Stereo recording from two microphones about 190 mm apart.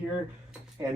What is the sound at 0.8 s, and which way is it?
Speech, 15° right (ahead or behind).